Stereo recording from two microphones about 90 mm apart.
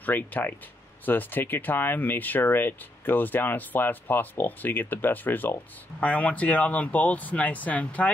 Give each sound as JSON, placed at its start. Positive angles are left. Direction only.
{"t": 0.0, "sound": "speech", "side_deg": 20}